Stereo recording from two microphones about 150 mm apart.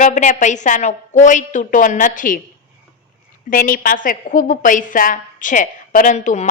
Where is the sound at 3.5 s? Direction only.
65° left (ahead or behind).